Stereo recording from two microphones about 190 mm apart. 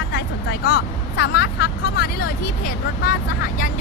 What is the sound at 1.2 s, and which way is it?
Speech, 60° left (ahead or behind).